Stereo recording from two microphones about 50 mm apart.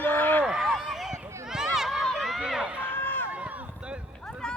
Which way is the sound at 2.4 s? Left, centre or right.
Centre.